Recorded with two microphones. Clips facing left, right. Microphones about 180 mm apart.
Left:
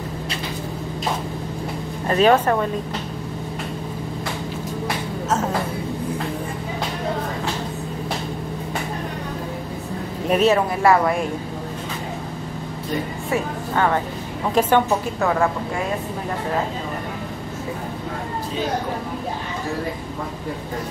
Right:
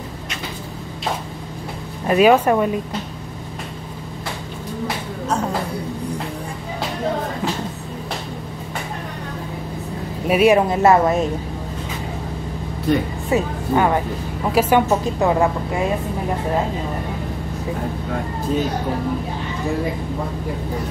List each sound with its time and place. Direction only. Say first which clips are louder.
2.0 s speech: right 3 dB; 10° right (ahead or behind)
10.2 s speech: right 3 dB; 10° right (ahead or behind)
10.7 s speech: right 3 dB; 25° right (ahead or behind)
13.3 s speech: right 5 dB; 15° right (ahead or behind)
14.9 s speech: right 3 dB; 20° right (ahead or behind)